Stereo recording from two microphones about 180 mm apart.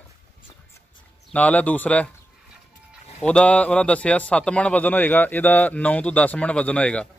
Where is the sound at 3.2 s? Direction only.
5° left (ahead or behind).